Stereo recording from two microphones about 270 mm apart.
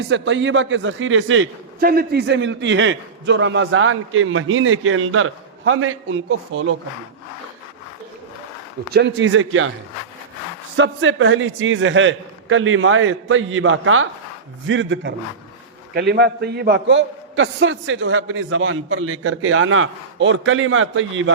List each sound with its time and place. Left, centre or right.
0.0 s a man's voice: right
1.8 s a man's voice: right
8.9 s a man's voice: right
10.8 s a man's voice: right